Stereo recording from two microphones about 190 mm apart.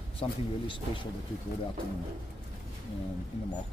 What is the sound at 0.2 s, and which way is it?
Speech, 30° left (ahead or behind).